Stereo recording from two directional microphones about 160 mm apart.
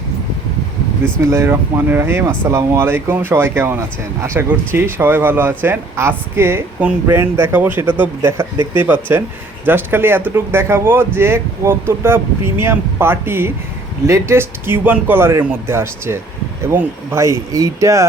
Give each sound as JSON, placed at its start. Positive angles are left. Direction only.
{"t": 1.2, "sound": "speech", "side_deg": -15}